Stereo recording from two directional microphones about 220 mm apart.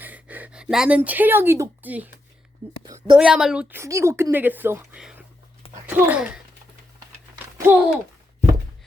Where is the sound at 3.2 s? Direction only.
5° right (ahead or behind).